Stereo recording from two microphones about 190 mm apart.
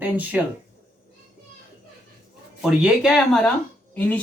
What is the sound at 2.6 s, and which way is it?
Speech, 5° right (ahead or behind).